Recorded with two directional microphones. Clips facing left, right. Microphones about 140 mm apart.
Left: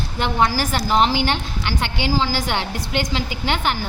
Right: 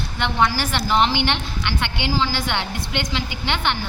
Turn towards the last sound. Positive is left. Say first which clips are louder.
# left 2 dB
turn(degrees=40)  # may be behind; listen again after turning